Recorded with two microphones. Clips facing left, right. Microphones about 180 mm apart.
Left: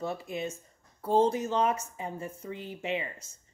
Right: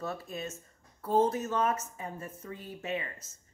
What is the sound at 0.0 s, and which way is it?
Speech, 15° left (ahead or behind).